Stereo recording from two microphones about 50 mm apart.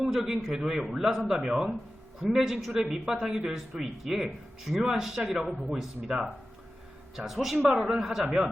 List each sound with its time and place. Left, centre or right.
0.0 s speech: centre